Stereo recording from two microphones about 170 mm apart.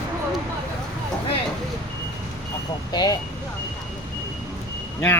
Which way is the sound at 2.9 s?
25° left (ahead or behind).